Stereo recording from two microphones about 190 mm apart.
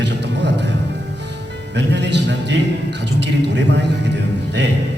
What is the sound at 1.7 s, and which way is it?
A man's voice, 65° right (ahead or behind).